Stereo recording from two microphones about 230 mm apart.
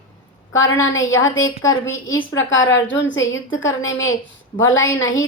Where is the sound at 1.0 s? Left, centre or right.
Left.